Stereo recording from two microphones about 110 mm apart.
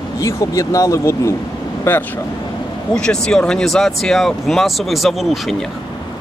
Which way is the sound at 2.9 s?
10° left (ahead or behind).